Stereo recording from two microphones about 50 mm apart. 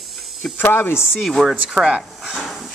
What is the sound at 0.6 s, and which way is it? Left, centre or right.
Speech, left.